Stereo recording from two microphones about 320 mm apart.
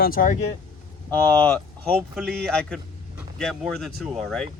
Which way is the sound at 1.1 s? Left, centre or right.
Centre.